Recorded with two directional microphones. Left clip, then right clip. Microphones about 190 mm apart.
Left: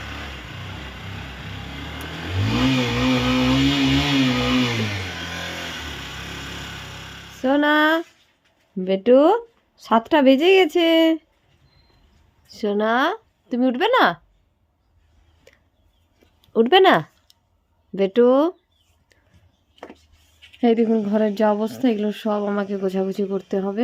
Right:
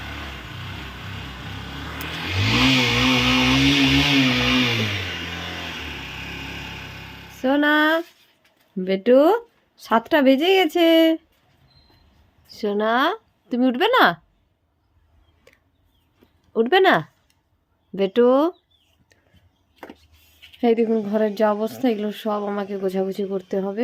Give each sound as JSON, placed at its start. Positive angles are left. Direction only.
{"t": 0.0, "sound": "vehicle", "side_deg": 50}
{"t": 7.3, "sound": "a sound", "side_deg": 5}
{"t": 8.8, "sound": "speech", "side_deg": 5}
{"t": 12.5, "sound": "speech", "side_deg": 5}
{"t": 15.5, "sound": "a sound", "side_deg": 0}
{"t": 16.5, "sound": "speech", "side_deg": 15}
{"t": 20.6, "sound": "speech", "side_deg": 5}